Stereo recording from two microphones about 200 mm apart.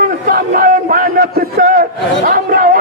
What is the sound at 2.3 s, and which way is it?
Chatter, 45° right (ahead or behind).